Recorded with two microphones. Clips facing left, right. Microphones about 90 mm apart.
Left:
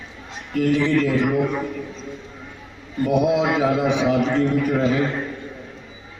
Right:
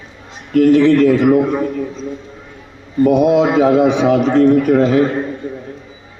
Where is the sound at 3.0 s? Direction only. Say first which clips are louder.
Right 7 dB; 65° right (ahead or behind).